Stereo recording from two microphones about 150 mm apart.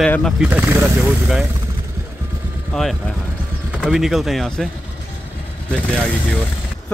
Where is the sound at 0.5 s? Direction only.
15° right (ahead or behind).